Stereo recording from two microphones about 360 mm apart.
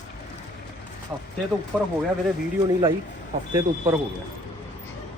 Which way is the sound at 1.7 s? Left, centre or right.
Centre.